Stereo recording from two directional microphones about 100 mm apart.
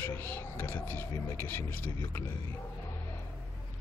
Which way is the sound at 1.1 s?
35° left (ahead or behind).